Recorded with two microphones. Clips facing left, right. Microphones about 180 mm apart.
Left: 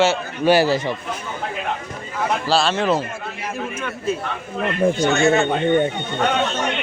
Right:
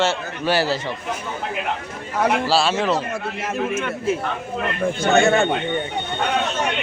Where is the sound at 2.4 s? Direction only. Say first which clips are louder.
Even; 5° right (ahead or behind).